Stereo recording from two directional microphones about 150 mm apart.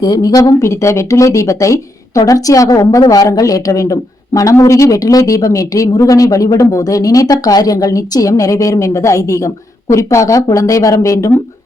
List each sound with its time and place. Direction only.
0.0 s speech: 25° left (ahead or behind)